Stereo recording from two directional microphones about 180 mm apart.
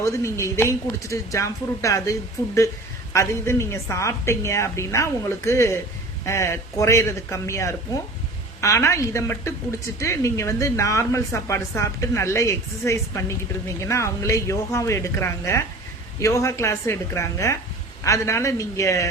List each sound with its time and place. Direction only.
0.0 s speech: 15° left (ahead or behind)